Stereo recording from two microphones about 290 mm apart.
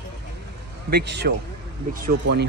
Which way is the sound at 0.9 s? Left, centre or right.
Right.